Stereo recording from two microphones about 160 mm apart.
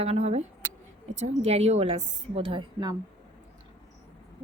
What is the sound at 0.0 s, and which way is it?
A woman's voice, 40° right (ahead or behind).